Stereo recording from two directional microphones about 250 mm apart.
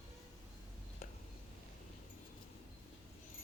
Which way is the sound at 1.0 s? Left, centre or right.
Left.